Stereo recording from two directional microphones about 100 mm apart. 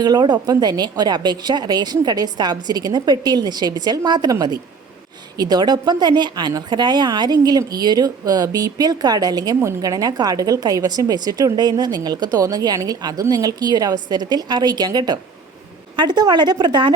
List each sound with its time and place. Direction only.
0.0 s a woman's voice: 45° right (ahead or behind)